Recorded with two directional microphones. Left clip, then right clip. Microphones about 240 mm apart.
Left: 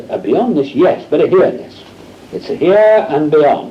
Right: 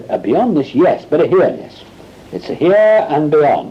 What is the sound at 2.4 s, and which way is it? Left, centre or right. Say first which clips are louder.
Speech: left 1 dB; right.